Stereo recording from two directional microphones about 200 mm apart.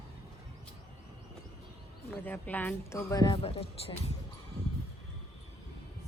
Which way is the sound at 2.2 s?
10° left (ahead or behind).